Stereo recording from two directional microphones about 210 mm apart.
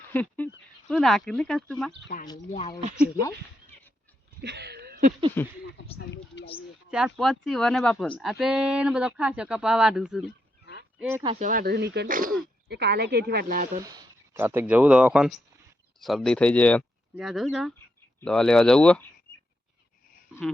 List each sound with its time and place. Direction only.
0.1 s speech: 10° left (ahead or behind)
4.4 s a sound: 55° right (ahead or behind)
5.4 s speech: 10° left (ahead or behind)
6.3 s a sound: 55° left (ahead or behind)
6.9 s speech: centre (ahead or behind)
10.7 s honk: 50° left (ahead or behind)
11.2 s speech: 25° right (ahead or behind)
11.4 s speech: 45° right (ahead or behind)
12.6 s speech: 50° right (ahead or behind)
13.7 s speech: 15° right (ahead or behind); by 19.0 s 5° left (ahead or behind)